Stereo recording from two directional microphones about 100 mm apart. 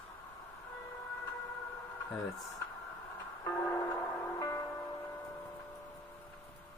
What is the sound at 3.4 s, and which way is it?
Music, 20° left (ahead or behind).